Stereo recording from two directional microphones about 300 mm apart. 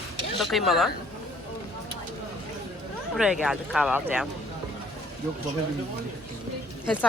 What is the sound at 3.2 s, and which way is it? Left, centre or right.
Speech, centre.